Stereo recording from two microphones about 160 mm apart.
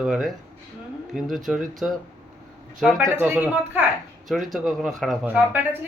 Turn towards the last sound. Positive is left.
turn(degrees=-10)  # may be behind; listen again after turning